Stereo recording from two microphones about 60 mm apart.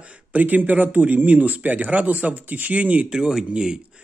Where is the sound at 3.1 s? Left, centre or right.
Centre.